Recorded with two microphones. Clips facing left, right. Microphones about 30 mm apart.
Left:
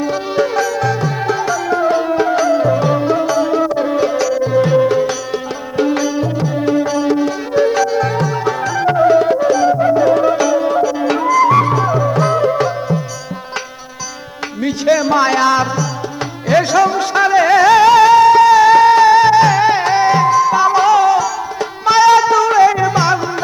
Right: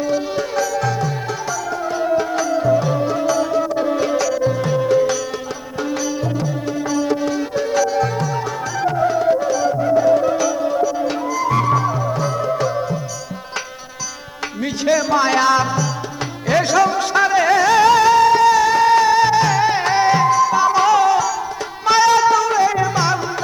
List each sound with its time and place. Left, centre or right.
0.3 s music: left; by 4.5 s centre
4.5 s music: left
5.7 s music: left
10.0 s music: left
11.4 s music: left
11.7 s music: left
14.6 s music: centre
17.5 s music: left
19.8 s music: centre
22.8 s music: left